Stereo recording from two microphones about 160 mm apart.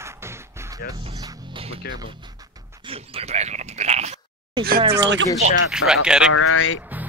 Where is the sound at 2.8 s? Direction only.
35° right (ahead or behind).